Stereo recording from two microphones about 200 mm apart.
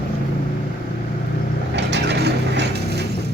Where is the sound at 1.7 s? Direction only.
60° right (ahead or behind).